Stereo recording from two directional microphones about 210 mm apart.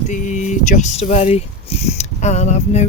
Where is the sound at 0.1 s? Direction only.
35° left (ahead or behind).